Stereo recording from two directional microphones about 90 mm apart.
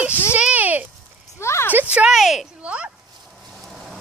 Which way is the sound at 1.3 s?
30° left (ahead or behind).